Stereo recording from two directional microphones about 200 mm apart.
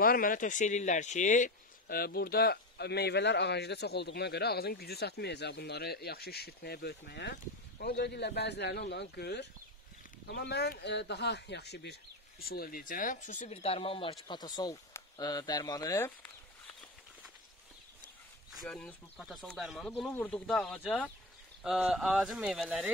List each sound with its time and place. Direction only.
0.0 s speech: 45° left (ahead or behind); by 16.1 s 15° left (ahead or behind)
18.5 s speech: centre (ahead or behind)